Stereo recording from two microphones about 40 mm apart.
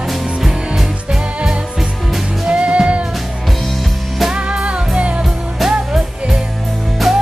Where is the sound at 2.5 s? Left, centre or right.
Right.